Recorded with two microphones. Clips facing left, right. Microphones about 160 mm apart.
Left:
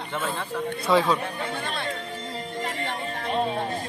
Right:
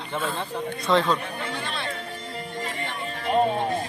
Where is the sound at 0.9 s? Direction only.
5° left (ahead or behind).